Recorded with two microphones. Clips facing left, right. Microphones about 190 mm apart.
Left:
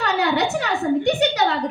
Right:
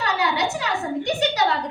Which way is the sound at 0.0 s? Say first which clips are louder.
Left 3 dB; 55° left (ahead or behind).